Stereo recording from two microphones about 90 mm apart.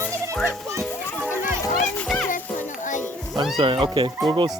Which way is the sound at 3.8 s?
65° right (ahead or behind).